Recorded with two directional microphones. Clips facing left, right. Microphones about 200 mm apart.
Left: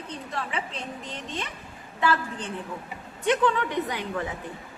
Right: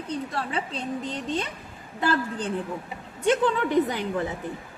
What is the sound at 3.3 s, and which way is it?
Speech, 35° right (ahead or behind).